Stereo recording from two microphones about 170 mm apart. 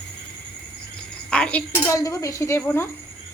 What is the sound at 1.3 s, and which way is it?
Speech, 5° left (ahead or behind).